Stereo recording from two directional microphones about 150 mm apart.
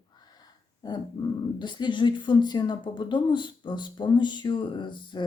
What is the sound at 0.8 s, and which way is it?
Speech, 25° left (ahead or behind).